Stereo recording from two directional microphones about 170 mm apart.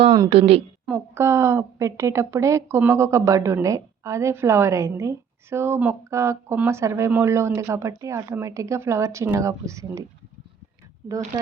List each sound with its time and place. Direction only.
0.1 s a woman's voice: 30° right (ahead or behind)
1.1 s a woman's voice: 15° right (ahead or behind)